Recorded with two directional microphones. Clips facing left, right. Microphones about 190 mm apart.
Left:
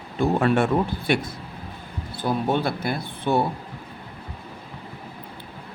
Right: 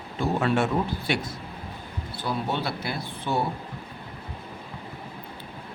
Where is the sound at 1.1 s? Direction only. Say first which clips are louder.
Left 6 dB; 55° left (ahead or behind).